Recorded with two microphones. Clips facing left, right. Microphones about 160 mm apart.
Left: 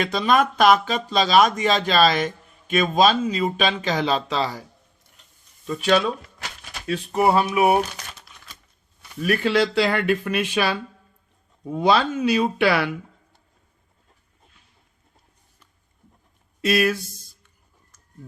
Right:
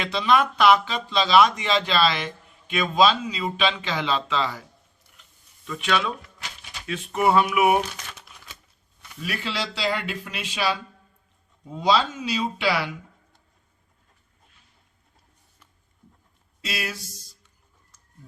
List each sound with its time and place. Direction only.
0.0 s speech: 45° left (ahead or behind)
5.6 s a sound: 35° left (ahead or behind)
8.3 s typewriter: 5° right (ahead or behind)
9.2 s speech: 50° left (ahead or behind)
16.6 s speech: 55° left (ahead or behind)